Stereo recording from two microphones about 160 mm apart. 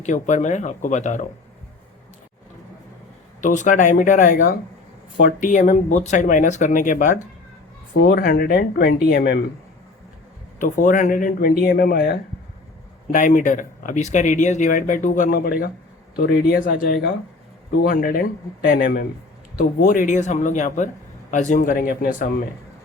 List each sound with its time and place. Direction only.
0.0 s speech: 50° left (ahead or behind)
3.4 s speech: 50° left (ahead or behind)
8.0 s speech: 65° left (ahead or behind)
10.6 s speech: 55° left (ahead or behind)
11.7 s speech: 70° left (ahead or behind)
13.1 s speech: 55° left (ahead or behind)
17.8 s speech: 65° left (ahead or behind)